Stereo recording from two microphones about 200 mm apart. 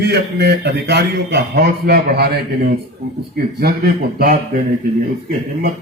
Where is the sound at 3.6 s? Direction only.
50° right (ahead or behind).